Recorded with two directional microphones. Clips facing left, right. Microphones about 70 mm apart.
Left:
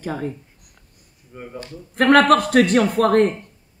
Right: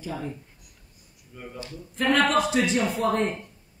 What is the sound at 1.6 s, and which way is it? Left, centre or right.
A woman's voice, left.